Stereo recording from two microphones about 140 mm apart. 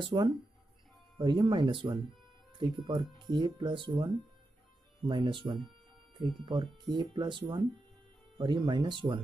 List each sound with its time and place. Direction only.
0.0 s speech: 30° right (ahead or behind)
3.2 s speech: 35° right (ahead or behind)